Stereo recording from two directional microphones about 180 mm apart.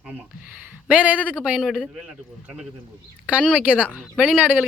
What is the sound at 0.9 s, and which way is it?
Speech, 10° right (ahead or behind).